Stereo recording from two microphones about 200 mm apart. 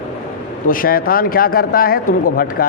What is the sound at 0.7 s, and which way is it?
A man's voice, 45° left (ahead or behind).